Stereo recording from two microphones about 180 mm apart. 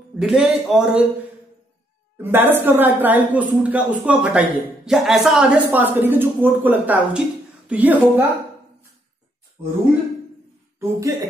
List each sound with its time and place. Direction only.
0.2 s speech: 5° right (ahead or behind)
2.1 s a woman's voice: 10° right (ahead or behind)
10.8 s speech: 20° right (ahead or behind)